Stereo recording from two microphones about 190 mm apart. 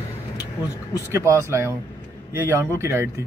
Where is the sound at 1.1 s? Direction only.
15° right (ahead or behind).